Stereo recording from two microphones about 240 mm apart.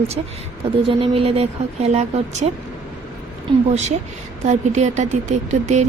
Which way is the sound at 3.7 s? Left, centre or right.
Right.